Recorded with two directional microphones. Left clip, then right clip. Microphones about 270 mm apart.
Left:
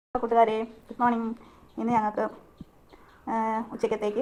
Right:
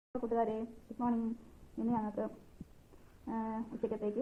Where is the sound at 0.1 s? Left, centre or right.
Left.